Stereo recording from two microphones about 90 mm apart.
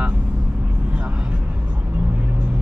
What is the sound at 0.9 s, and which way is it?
Vehicle, 10° right (ahead or behind).